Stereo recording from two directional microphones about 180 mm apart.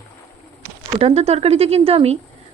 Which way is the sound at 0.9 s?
35° right (ahead or behind).